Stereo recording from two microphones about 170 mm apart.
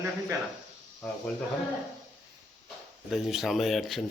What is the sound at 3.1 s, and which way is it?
Speech, centre (ahead or behind).